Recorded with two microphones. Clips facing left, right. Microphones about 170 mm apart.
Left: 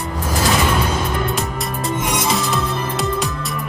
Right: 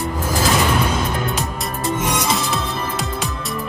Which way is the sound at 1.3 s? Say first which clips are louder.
Left 1 dB; centre (ahead or behind).